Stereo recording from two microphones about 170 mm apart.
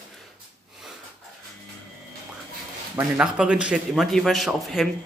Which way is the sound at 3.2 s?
5° right (ahead or behind).